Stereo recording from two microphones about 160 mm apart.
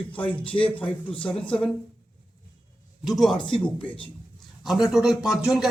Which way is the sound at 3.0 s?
Centre (ahead or behind).